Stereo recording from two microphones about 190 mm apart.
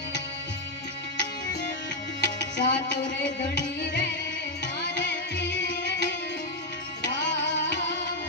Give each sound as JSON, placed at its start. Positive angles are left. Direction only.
{"t": 2.2, "sound": "music", "side_deg": 65}
{"t": 7.0, "sound": "tabla", "side_deg": 65}